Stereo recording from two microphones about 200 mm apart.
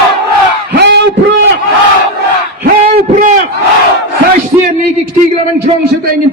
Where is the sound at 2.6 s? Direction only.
45° right (ahead or behind).